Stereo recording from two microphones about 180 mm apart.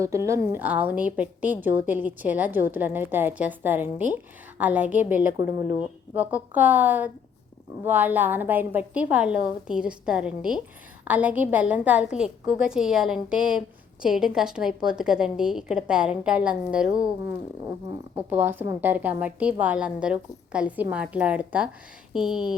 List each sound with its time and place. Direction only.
0.0 s a woman's voice: 15° right (ahead or behind)
18.1 s a woman's voice: 10° right (ahead or behind)